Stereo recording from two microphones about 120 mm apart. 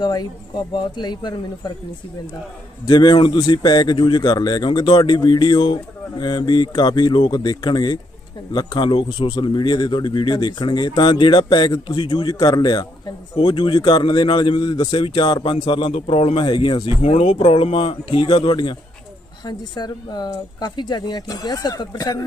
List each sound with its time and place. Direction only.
0.0 s speech: 35° left (ahead or behind)
2.8 s speech: 35° left (ahead or behind)
12.3 s a man's voice: 30° left (ahead or behind)
17.1 s a man's voice: 55° left (ahead or behind); by 22.3 s 30° left (ahead or behind)